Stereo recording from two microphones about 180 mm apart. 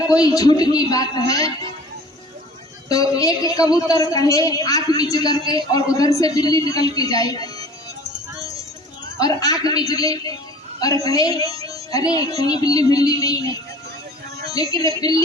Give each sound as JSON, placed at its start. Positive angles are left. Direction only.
{"t": 0.1, "sound": "a woman's voice", "side_deg": 20}
{"t": 2.9, "sound": "a woman's voice", "side_deg": 20}
{"t": 9.1, "sound": "a woman's voice", "side_deg": 20}
{"t": 11.9, "sound": "music", "side_deg": 20}
{"t": 12.4, "sound": "a woman's voice", "side_deg": 20}